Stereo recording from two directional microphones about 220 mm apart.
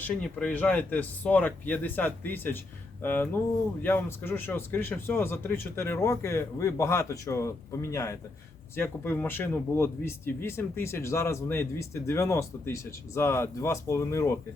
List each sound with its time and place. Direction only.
0.0 s speech: 5° left (ahead or behind)